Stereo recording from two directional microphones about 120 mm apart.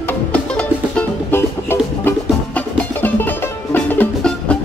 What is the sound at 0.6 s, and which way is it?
Music, 15° left (ahead or behind).